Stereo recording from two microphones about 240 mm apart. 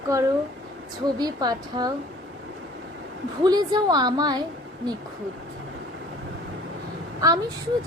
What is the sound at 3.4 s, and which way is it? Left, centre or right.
Speech, centre.